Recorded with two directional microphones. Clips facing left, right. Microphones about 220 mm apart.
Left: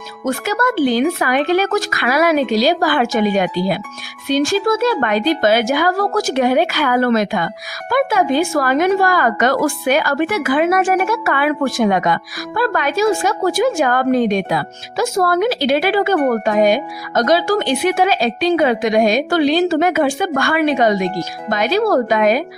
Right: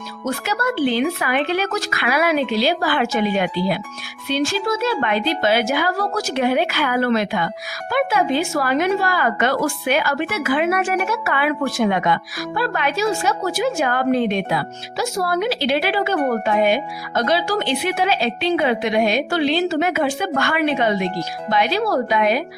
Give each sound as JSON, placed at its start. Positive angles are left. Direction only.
{"t": 0.3, "sound": "a woman's voice", "side_deg": 50}